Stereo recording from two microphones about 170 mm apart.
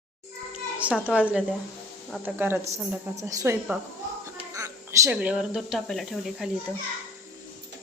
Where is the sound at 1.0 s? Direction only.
10° right (ahead or behind).